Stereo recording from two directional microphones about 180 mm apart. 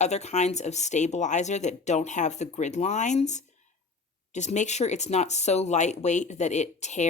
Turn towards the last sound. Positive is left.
turn(degrees=40)  # may be behind; listen again after turning